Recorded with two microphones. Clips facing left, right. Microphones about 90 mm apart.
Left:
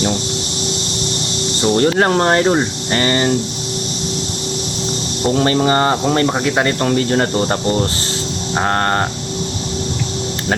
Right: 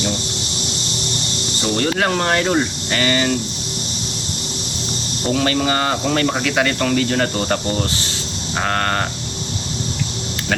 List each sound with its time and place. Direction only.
1.6 s speech: 30° left (ahead or behind)
5.3 s speech: 30° left (ahead or behind)